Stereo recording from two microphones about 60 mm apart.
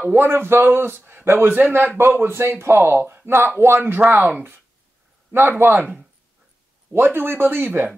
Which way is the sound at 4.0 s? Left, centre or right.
Right.